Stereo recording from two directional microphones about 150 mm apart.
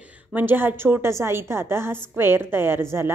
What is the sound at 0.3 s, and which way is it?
A woman's voice, 15° right (ahead or behind).